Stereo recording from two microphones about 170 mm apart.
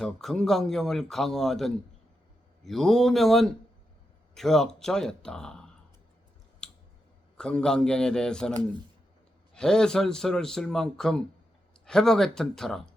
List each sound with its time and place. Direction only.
0.0 s speech: 5° left (ahead or behind)
6.6 s clicking: 5° left (ahead or behind)
7.3 s speech: 5° left (ahead or behind)
9.6 s speech: 5° left (ahead or behind)